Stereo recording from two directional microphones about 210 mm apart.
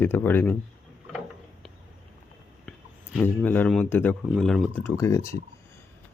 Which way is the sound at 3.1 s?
10° left (ahead or behind).